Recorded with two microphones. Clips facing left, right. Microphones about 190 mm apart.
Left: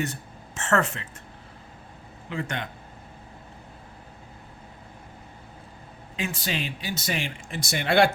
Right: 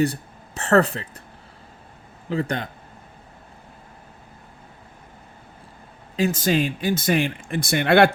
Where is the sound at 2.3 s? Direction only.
35° right (ahead or behind).